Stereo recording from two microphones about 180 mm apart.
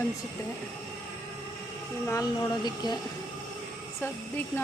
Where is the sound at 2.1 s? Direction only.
15° left (ahead or behind).